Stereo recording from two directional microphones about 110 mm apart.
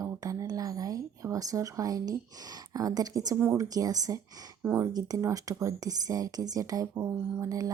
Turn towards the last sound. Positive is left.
turn(degrees=-30)  # may be behind; listen again after turning